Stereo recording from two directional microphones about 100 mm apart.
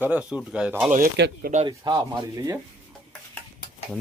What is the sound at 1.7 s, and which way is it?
Speech, 45° right (ahead or behind).